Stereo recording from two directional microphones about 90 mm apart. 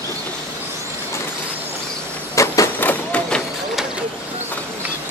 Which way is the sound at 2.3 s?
35° left (ahead or behind).